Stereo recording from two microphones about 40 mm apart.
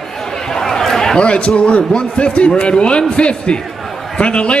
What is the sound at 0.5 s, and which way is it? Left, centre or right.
Chatter, centre.